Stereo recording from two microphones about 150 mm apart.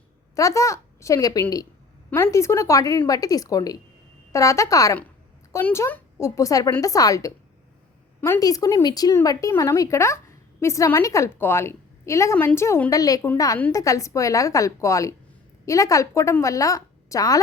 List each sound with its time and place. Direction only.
0.3 s speech: 20° left (ahead or behind)